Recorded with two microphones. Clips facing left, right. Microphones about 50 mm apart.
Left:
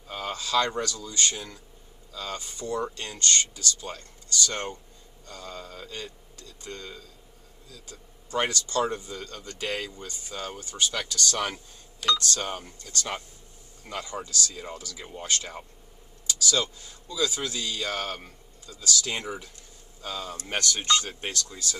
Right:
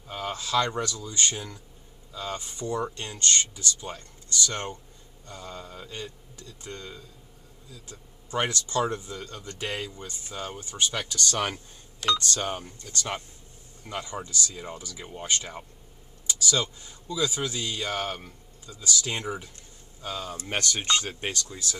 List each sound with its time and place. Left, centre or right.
0.0 s speech: centre
12.0 s speech: centre
12.4 s speech: centre
13.8 s speech: centre